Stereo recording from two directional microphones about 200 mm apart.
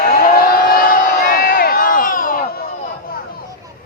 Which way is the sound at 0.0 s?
50° left (ahead or behind).